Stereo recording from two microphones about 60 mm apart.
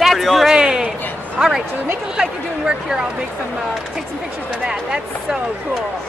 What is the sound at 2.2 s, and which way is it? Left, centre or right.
Speech, centre.